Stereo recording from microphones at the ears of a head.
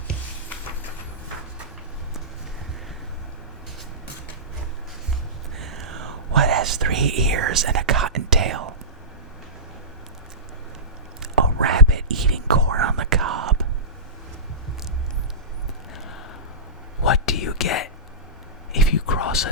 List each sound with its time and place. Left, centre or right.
5.5 s whispering: right
11.2 s whispering: right
17.0 s whispering: left
18.7 s a sound: left